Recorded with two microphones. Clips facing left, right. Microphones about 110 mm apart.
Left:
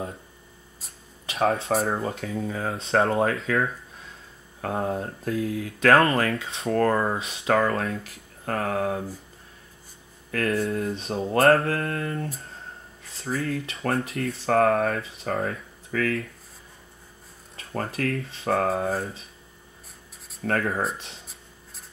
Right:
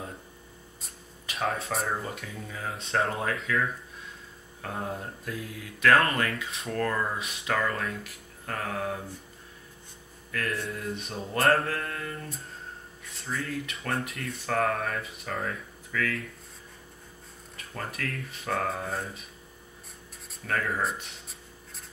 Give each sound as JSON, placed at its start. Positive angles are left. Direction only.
{"t": 1.2, "sound": "speech", "side_deg": 30}
{"t": 1.9, "sound": "mantra", "side_deg": 30}
{"t": 2.4, "sound": "speech", "side_deg": 45}
{"t": 3.0, "sound": "speech", "side_deg": 35}
{"t": 10.3, "sound": "speech", "side_deg": 30}
{"t": 10.7, "sound": "mantra", "side_deg": 30}
{"t": 11.4, "sound": "speech", "side_deg": 30}
{"t": 13.3, "sound": "speech", "side_deg": 30}
{"t": 15.2, "sound": "speech", "side_deg": 45}
{"t": 17.6, "sound": "speech", "side_deg": 30}
{"t": 20.4, "sound": "speech", "side_deg": 45}